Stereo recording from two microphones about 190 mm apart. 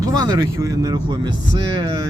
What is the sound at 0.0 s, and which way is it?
Speech, 20° right (ahead or behind).